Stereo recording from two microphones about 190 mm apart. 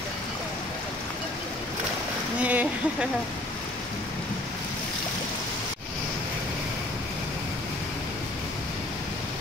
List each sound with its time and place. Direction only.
2.4 s speech: 10° right (ahead or behind)